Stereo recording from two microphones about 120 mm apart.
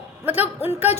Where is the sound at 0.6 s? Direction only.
15° right (ahead or behind).